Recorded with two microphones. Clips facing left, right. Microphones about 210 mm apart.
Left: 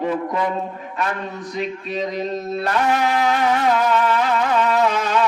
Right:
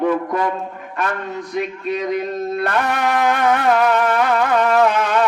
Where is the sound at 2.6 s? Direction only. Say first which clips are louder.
Left 2 dB; 55° right (ahead or behind).